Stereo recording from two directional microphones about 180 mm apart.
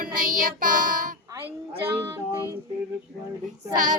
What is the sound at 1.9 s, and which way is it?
Music, 15° right (ahead or behind).